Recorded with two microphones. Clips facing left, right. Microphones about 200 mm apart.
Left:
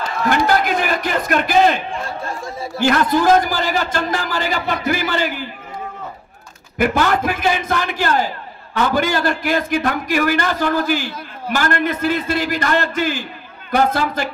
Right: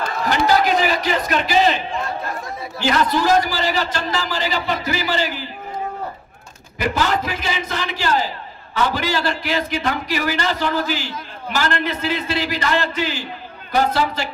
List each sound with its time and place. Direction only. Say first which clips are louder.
0.3 s a man's voice: even; 55° left (ahead or behind)
2.0 s chatter: even; 30° left (ahead or behind)
2.8 s a man's voice: left 3 dB; 50° left (ahead or behind)
6.8 s a man's voice: left 4 dB; 50° left (ahead or behind)